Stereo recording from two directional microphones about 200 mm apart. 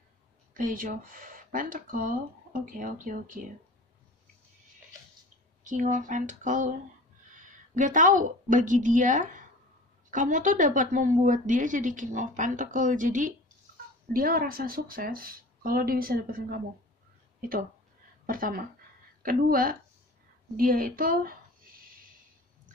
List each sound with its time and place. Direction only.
0.6 s speech: 40° right (ahead or behind)
5.6 s a woman's voice: 40° right (ahead or behind)
18.2 s a woman's voice: 45° right (ahead or behind)